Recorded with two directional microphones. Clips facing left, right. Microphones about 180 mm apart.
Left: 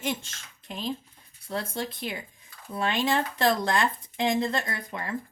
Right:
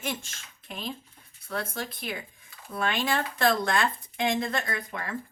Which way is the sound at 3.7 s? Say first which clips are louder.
Left 1 dB; 25° left (ahead or behind).